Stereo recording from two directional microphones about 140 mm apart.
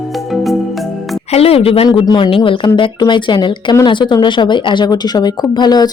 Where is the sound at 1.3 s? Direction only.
45° left (ahead or behind).